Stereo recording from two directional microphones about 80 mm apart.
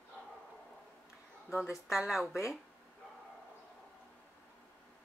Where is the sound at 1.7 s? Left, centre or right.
Centre.